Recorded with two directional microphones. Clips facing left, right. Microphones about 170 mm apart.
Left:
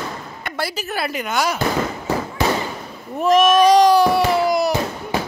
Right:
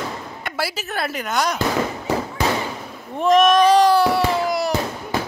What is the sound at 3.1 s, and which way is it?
Speech, 5° left (ahead or behind).